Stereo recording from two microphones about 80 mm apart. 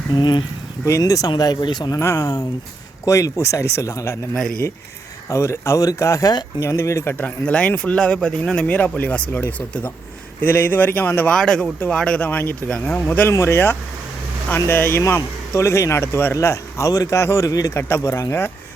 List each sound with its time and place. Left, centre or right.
0.1 s speech: left
0.9 s speech: left
1.4 s speech: left
2.0 s speech: left
5.3 s speech: left
11.3 s speech: centre
12.2 s speech: left
13.3 s speech: left
16.9 s speech: left
17.2 s speech: left
17.7 s speech: left